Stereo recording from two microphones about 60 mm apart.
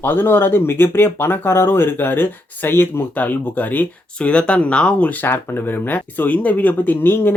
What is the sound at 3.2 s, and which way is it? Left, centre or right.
Speech, left.